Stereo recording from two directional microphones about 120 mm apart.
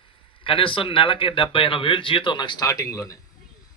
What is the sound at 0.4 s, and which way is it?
A man's voice, 45° left (ahead or behind).